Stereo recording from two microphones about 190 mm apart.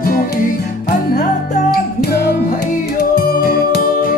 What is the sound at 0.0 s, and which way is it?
Music, 50° left (ahead or behind).